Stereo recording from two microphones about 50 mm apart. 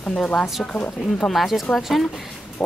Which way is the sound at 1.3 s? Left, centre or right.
Centre.